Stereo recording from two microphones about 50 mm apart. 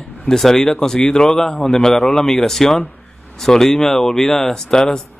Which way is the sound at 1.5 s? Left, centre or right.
Left.